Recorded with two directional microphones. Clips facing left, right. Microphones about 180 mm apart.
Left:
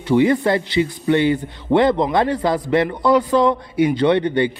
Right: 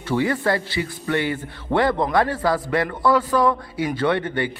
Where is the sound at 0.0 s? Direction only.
20° left (ahead or behind).